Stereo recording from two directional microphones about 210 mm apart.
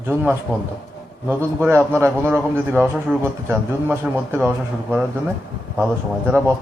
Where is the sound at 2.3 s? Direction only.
10° right (ahead or behind).